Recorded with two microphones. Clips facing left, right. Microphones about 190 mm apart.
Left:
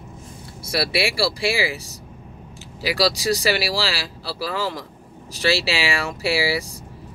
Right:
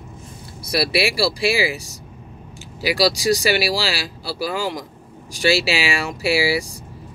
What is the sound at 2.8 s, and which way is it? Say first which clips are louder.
Speech: right 2 dB; 15° right (ahead or behind).